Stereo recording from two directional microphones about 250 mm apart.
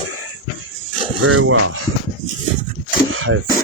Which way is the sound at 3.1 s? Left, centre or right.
Right.